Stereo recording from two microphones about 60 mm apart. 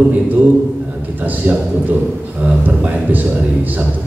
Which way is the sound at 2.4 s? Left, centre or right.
Right.